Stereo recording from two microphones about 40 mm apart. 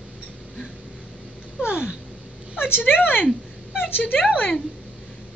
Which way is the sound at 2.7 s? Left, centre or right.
Left.